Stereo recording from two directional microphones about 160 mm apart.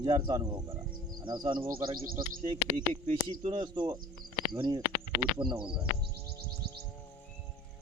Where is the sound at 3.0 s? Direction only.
45° right (ahead or behind).